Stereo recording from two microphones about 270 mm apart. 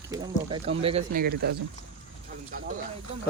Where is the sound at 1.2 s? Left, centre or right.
Right.